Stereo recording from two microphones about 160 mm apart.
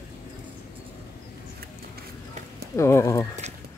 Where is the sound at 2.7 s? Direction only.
20° left (ahead or behind).